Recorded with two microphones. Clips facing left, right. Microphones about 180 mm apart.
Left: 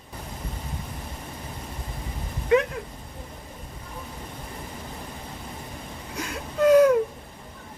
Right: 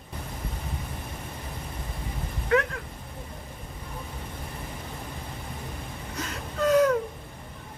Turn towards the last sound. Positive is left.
turn(degrees=10)  # may be behind; listen again after turning